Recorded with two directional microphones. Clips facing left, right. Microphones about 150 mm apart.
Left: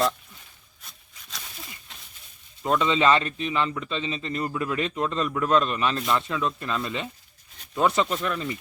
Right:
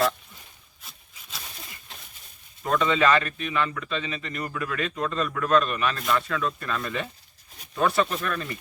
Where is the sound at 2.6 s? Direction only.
20° left (ahead or behind).